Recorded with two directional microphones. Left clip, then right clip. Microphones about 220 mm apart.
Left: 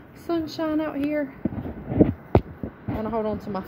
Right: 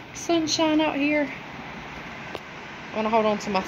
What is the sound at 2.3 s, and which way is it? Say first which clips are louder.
Heart sounds: left 19 dB; 20° left (ahead or behind).